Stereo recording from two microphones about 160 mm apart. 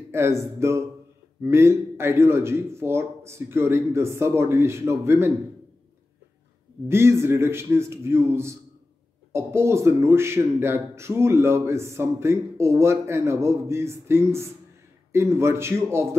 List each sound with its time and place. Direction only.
0.1 s speech: 15° right (ahead or behind)
6.9 s speech: 15° right (ahead or behind)